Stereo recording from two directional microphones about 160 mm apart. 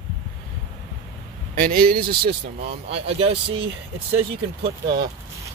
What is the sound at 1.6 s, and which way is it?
Speech, 60° right (ahead or behind).